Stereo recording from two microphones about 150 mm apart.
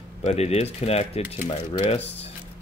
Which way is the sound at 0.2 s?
45° left (ahead or behind).